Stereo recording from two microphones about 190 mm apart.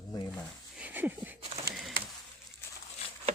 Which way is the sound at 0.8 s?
10° right (ahead or behind).